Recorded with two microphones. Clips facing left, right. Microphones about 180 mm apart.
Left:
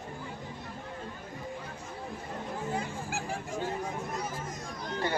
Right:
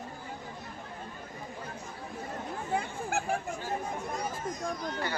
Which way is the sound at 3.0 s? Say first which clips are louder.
Right 5 dB; 55° right (ahead or behind).